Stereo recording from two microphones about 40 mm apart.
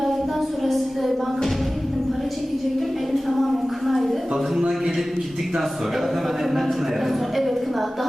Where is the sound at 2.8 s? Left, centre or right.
Centre.